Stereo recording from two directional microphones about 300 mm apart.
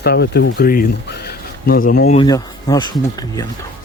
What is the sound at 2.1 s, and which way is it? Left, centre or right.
Speech, centre.